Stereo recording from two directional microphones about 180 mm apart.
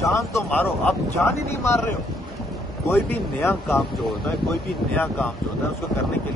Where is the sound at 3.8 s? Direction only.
Centre (ahead or behind).